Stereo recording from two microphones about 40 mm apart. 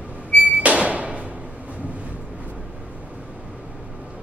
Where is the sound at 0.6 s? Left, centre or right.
Right.